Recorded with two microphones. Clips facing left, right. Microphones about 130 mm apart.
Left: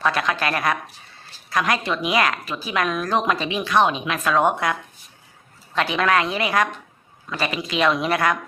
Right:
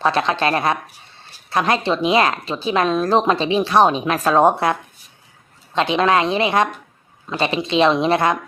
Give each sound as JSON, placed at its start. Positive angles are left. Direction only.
{"t": 0.0, "sound": "speech", "side_deg": -30}
{"t": 5.7, "sound": "speech", "side_deg": -20}